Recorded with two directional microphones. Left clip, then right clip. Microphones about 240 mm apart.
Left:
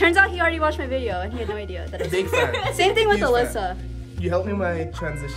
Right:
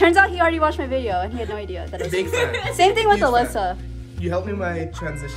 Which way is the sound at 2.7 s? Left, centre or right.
Centre.